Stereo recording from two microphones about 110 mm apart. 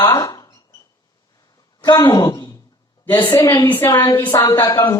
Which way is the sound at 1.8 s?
40° left (ahead or behind).